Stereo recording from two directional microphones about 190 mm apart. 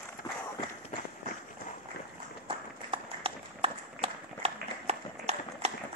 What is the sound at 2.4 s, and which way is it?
Run, 30° right (ahead or behind).